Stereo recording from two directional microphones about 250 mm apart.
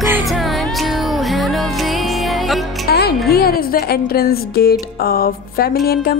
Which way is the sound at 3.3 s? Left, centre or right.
Left.